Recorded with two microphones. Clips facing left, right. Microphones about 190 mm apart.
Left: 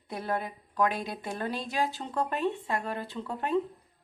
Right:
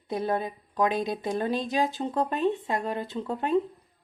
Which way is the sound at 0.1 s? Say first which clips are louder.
Right 5 dB; 20° right (ahead or behind).